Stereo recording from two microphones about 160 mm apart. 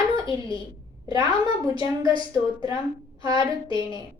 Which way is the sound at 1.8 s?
30° left (ahead or behind).